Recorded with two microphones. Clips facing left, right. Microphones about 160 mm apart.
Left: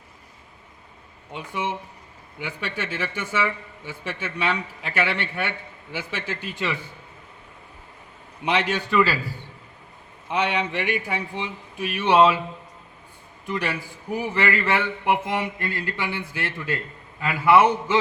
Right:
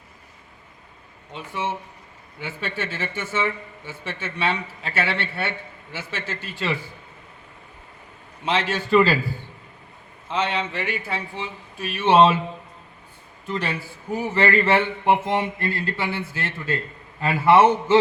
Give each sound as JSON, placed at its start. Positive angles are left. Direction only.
{"t": 1.3, "sound": "a man's voice", "side_deg": 15}
{"t": 8.4, "sound": "a man's voice", "side_deg": 15}
{"t": 8.9, "sound": "a man's voice", "side_deg": -30}
{"t": 10.2, "sound": "a man's voice", "side_deg": 15}
{"t": 12.0, "sound": "mantra", "side_deg": -25}
{"t": 13.7, "sound": "a man's voice", "side_deg": 10}
{"t": 14.4, "sound": "mantra", "side_deg": -30}
{"t": 15.7, "sound": "a man's voice", "side_deg": 15}
{"t": 17.2, "sound": "mantra", "side_deg": -30}